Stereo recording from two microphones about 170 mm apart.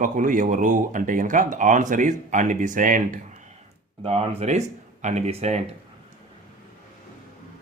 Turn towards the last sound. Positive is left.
turn(degrees=-40)  # may be behind; listen again after turning